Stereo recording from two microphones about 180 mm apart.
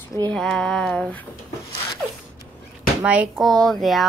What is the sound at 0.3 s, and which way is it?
Speech, 5° left (ahead or behind).